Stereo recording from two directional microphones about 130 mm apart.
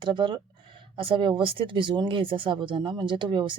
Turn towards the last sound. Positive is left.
turn(degrees=-35)  # may be behind; listen again after turning